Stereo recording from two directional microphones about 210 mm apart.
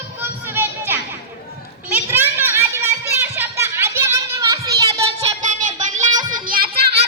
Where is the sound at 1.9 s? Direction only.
10° right (ahead or behind).